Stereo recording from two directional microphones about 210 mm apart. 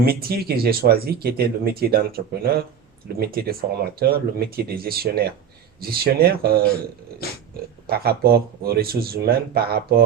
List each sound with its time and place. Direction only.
0.0 s speech: 45° right (ahead or behind)
7.9 s speech: 45° right (ahead or behind)